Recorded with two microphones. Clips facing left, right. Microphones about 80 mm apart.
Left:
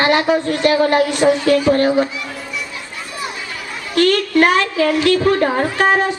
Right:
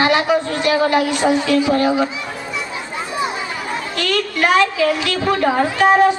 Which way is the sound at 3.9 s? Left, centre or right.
Left.